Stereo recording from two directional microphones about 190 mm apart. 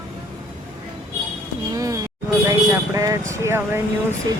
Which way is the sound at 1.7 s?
15° right (ahead or behind).